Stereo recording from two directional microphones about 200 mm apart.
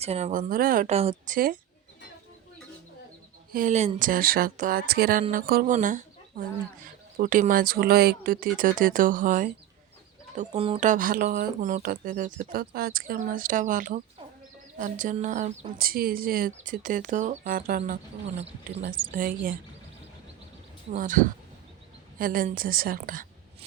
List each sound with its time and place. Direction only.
0.0 s speech: 35° right (ahead or behind)
3.5 s speech: 40° right (ahead or behind)
10.3 s speech: 30° right (ahead or behind)
18.9 s speech: 45° right (ahead or behind)
20.9 s speech: 40° right (ahead or behind)